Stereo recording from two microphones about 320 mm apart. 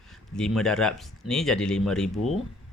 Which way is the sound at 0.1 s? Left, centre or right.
Centre.